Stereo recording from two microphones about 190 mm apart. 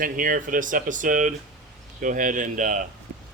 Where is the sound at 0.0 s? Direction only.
45° right (ahead or behind).